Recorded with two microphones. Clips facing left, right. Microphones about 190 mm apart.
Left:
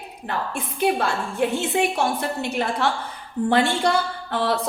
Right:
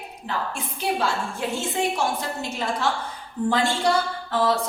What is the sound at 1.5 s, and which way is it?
A woman's voice, 60° left (ahead or behind).